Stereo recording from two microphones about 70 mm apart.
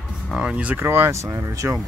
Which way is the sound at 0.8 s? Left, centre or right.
Right.